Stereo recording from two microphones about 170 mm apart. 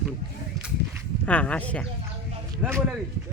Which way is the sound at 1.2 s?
5° left (ahead or behind).